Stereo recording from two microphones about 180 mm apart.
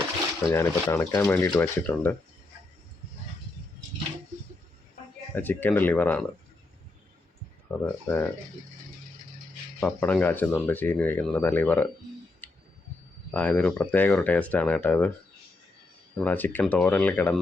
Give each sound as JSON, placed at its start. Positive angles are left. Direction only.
{"t": 0.4, "sound": "speech", "side_deg": 15}
{"t": 5.3, "sound": "speech", "side_deg": 10}
{"t": 7.7, "sound": "speech", "side_deg": 5}
{"t": 9.8, "sound": "speech", "side_deg": 10}
{"t": 12.4, "sound": "a sound", "side_deg": 10}
{"t": 13.3, "sound": "speech", "side_deg": 10}
{"t": 16.1, "sound": "speech", "side_deg": 10}